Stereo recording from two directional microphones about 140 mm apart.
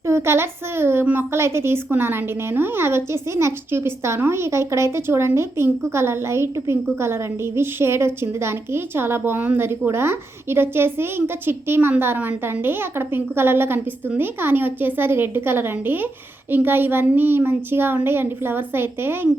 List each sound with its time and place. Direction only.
0.1 s a woman's voice: 20° right (ahead or behind)